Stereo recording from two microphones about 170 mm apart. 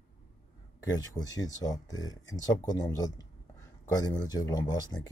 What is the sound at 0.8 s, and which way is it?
Speech, 20° left (ahead or behind).